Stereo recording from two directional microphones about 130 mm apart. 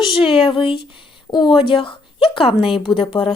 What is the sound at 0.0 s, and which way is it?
Speech, 40° left (ahead or behind).